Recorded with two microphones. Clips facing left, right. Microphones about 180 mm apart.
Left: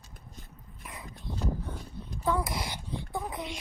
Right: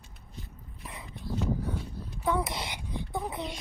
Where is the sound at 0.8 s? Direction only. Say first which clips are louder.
Right 1 dB; 30° right (ahead or behind).